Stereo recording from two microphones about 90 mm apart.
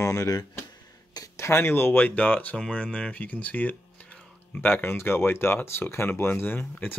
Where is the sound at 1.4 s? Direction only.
30° left (ahead or behind).